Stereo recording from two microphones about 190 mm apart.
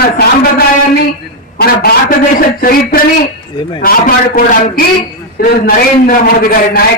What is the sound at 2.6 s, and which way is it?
A man's voice, 50° left (ahead or behind).